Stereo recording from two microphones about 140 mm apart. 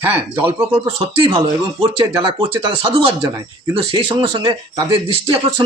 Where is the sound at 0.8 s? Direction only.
40° right (ahead or behind).